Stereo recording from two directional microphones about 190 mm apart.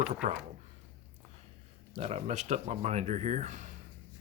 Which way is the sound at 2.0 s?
35° right (ahead or behind).